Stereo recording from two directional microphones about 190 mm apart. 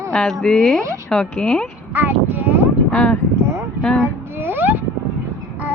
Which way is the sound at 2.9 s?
5° left (ahead or behind).